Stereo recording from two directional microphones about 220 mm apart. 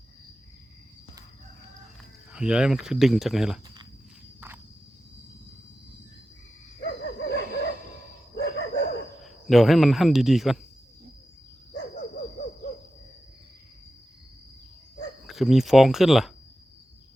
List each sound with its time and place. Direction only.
2.3 s speech: 5° right (ahead or behind)
4.4 s walk: 10° right (ahead or behind)
6.8 s a sound: 50° left (ahead or behind)
8.4 s cricket: 50° left (ahead or behind)
9.2 s speech: centre (ahead or behind)
15.3 s speech: centre (ahead or behind)